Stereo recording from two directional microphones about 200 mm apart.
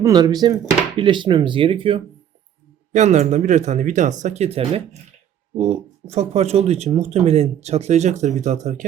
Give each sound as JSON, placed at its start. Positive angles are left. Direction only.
{"t": 0.0, "sound": "speech", "side_deg": -20}
{"t": 2.9, "sound": "speech", "side_deg": -35}